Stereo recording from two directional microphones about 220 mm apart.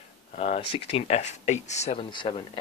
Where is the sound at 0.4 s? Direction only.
25° left (ahead or behind).